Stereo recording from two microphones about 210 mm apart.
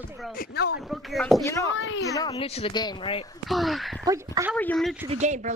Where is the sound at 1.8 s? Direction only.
65° left (ahead or behind).